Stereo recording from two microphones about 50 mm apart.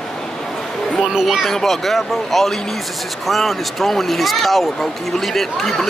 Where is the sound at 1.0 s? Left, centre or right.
Centre.